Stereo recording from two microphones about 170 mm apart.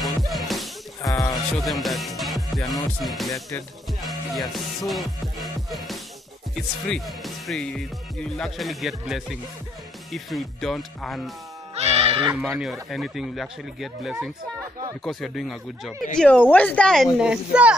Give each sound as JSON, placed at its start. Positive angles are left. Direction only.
{"t": 0.3, "sound": "music", "side_deg": 0}
{"t": 1.0, "sound": "music", "side_deg": 20}
{"t": 1.6, "sound": "music", "side_deg": 0}
{"t": 11.7, "sound": "music", "side_deg": -35}
{"t": 12.4, "sound": "music", "side_deg": -5}